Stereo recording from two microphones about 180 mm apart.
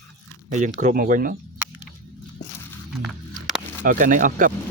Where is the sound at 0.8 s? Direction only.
45° right (ahead or behind).